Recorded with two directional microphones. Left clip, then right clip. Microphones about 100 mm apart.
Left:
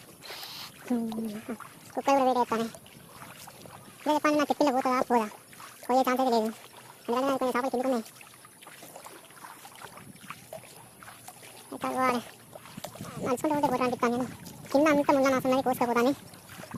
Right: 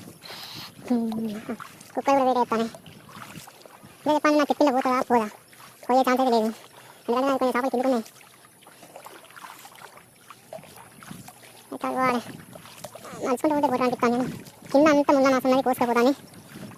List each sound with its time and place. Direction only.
0.3 s a sound: 10° right (ahead or behind)
1.5 s speech: 10° right (ahead or behind)
2.7 s boat: 45° right (ahead or behind)
4.0 s speech: 10° right (ahead or behind)
11.9 s speech: 10° right (ahead or behind)
12.8 s rowboat: 5° right (ahead or behind)
13.2 s speech: 10° right (ahead or behind)